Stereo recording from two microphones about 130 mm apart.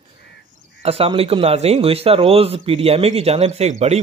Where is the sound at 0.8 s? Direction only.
50° right (ahead or behind).